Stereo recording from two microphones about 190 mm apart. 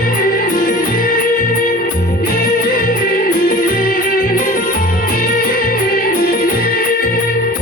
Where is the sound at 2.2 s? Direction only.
50° left (ahead or behind).